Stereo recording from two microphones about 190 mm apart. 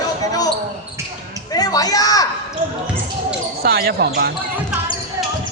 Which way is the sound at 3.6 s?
55° right (ahead or behind).